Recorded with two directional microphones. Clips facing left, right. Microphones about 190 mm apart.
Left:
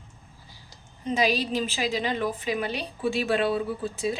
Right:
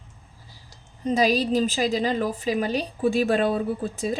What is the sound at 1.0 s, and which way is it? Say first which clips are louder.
A woman's voice: right 4 dB; 40° right (ahead or behind).